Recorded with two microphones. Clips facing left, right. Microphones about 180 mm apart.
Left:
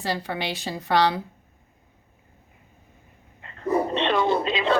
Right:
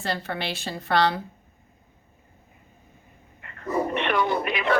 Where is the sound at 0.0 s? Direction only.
15° left (ahead or behind).